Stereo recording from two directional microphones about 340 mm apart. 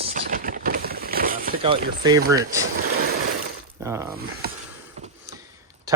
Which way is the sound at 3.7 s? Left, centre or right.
Centre.